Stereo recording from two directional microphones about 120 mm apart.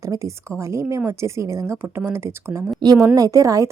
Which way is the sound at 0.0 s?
25° right (ahead or behind).